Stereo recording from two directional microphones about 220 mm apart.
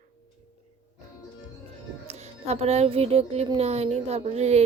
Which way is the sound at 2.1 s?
30° right (ahead or behind).